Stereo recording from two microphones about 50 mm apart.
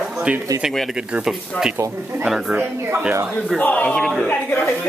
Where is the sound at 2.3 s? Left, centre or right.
Centre.